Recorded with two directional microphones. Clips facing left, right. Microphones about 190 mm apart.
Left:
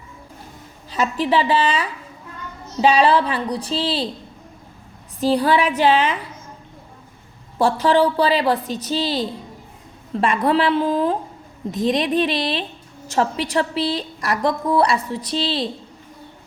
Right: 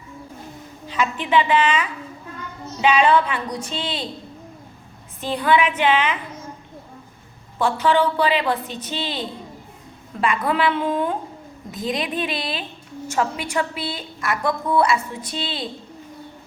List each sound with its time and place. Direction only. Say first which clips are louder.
0.9 s a woman's voice: left 3 dB; 40° left (ahead or behind)
5.2 s a woman's voice: left 2 dB; 35° left (ahead or behind)
7.6 s a woman's voice: left 3 dB; 35° left (ahead or behind)
11.7 s a woman's voice: left 6 dB; centre (ahead or behind)
11.9 s a woman's voice: left 6 dB; 40° left (ahead or behind)